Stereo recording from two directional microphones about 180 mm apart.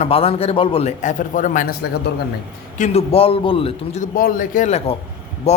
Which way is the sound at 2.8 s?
35° left (ahead or behind).